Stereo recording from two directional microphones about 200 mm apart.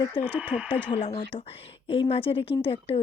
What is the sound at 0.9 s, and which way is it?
Speech, 30° left (ahead or behind).